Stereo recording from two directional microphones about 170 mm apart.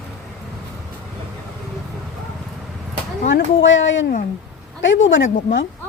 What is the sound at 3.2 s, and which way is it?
Speech, 90° left.